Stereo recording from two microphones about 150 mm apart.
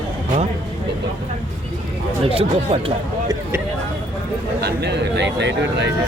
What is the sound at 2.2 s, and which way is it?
Speech, 40° right (ahead or behind).